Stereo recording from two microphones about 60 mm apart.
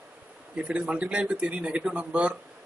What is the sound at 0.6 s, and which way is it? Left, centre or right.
Speech, right.